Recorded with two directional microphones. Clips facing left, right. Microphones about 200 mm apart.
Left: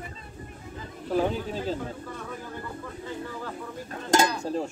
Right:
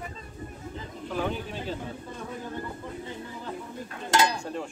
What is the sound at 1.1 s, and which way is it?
Speech, 40° left (ahead or behind).